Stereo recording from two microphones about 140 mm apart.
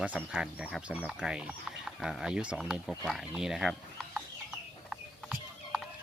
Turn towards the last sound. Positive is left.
turn(degrees=0)  # may be behind; listen again after turning